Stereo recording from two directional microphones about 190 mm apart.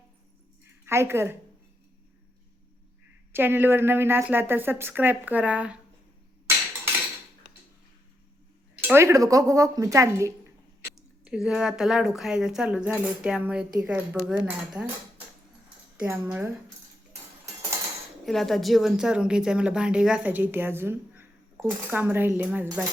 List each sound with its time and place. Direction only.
0.6 s a sound: 15° right (ahead or behind)
3.3 s a woman's voice: 10° right (ahead or behind)
8.8 s a woman's voice: 10° right (ahead or behind)
10.9 s a woman's voice: 5° right (ahead or behind)
16.0 s a woman's voice: 5° right (ahead or behind)
18.3 s a woman's voice: centre (ahead or behind)